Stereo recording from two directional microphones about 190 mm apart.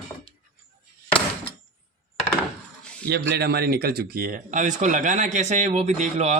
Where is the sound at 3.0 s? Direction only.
60° right (ahead or behind).